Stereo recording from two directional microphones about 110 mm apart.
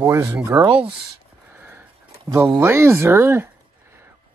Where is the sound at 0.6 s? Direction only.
60° right (ahead or behind).